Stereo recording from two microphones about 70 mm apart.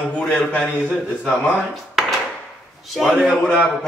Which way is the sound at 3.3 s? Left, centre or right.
Right.